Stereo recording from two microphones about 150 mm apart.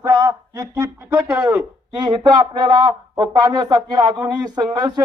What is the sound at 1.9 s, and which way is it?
Speech, 30° right (ahead or behind).